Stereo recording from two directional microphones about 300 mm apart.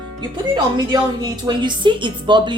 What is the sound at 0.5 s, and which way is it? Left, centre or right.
Speech, centre.